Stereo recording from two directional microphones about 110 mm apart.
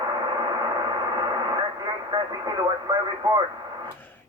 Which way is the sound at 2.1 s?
45° right (ahead or behind).